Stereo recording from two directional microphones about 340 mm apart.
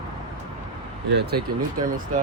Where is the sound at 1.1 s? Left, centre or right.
Right.